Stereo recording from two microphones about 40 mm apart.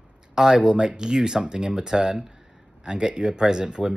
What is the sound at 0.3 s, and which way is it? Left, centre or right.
Speech, centre.